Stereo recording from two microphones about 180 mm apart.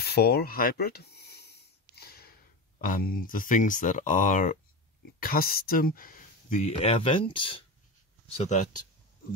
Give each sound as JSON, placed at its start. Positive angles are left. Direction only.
{"t": 0.0, "sound": "a sound", "side_deg": 60}
{"t": 2.8, "sound": "speech", "side_deg": 50}
{"t": 8.3, "sound": "speech", "side_deg": 40}